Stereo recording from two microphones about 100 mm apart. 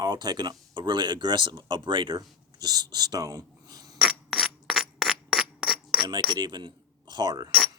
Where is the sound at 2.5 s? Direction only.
45° right (ahead or behind).